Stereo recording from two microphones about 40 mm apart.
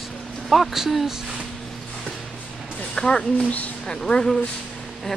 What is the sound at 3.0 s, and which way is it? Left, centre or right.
Speech, centre.